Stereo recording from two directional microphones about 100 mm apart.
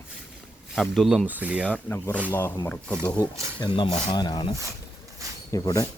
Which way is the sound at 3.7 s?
50° left (ahead or behind).